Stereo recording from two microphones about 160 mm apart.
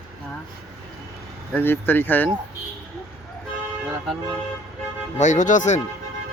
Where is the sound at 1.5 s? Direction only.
15° left (ahead or behind).